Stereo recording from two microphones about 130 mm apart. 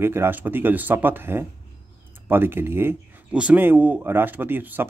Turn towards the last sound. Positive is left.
turn(degrees=-15)  # may be behind; listen again after turning